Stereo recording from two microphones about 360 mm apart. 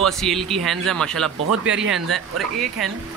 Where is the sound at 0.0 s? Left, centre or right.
Centre.